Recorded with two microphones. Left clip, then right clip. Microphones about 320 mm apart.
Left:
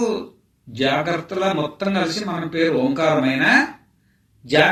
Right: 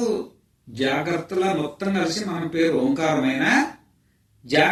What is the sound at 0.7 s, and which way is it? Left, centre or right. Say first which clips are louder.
Speech: left 3 dB; left.